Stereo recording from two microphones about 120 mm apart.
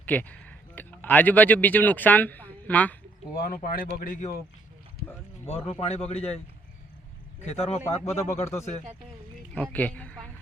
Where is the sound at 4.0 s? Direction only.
90° left.